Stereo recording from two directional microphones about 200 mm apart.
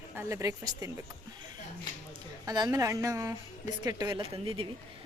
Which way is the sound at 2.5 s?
20° right (ahead or behind).